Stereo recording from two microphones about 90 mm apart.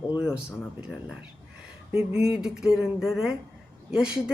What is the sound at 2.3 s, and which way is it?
Speech, 10° right (ahead or behind).